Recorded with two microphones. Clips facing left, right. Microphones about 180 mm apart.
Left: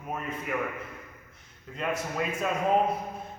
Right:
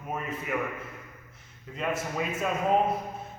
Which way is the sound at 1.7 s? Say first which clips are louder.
Even; centre (ahead or behind).